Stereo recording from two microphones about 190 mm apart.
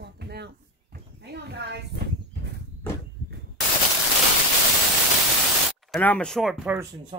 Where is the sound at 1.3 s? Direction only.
60° right (ahead or behind).